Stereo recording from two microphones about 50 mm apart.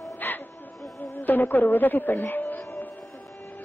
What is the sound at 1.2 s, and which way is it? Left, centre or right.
A woman's voice, left.